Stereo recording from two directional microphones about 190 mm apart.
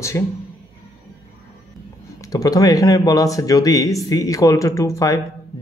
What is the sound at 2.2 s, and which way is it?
A man's voice, 20° left (ahead or behind).